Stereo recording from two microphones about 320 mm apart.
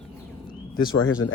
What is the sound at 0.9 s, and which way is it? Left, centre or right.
Speech, left.